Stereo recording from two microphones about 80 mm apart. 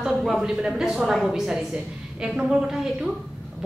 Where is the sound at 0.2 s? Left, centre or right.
Centre.